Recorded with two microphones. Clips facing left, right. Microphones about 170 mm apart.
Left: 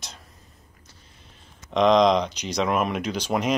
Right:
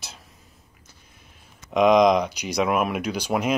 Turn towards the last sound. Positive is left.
turn(degrees=-5)  # may be behind; listen again after turning